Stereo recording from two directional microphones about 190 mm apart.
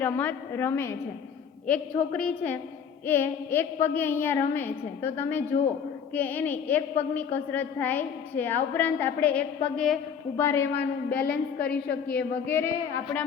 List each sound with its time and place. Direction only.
0.0 s a woman's voice: 10° left (ahead or behind)
11.7 s speech: 55° left (ahead or behind)
12.1 s a woman's voice: 10° left (ahead or behind)